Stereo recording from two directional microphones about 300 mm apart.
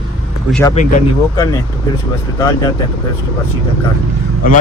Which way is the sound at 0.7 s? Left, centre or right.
Left.